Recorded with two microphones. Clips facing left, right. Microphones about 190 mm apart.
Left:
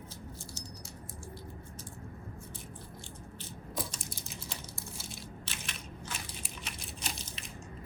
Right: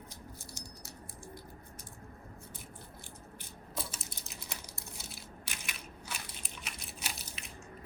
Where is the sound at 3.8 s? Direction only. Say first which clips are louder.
Left 3 dB; 5° right (ahead or behind).